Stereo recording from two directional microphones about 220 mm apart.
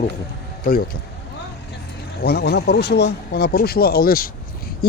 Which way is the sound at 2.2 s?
45° left (ahead or behind).